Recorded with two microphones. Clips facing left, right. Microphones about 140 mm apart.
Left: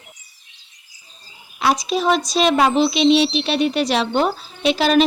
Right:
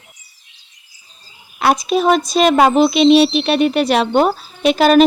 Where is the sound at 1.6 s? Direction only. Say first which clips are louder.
Right 4 dB; 55° right (ahead or behind).